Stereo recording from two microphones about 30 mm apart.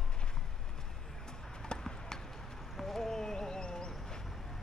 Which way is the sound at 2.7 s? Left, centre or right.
Centre.